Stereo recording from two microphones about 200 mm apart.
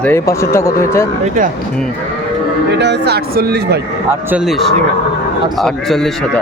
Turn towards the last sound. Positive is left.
turn(degrees=0)  # may be behind; listen again after turning